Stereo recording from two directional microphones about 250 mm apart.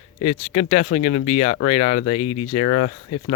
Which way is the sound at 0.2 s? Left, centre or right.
Left.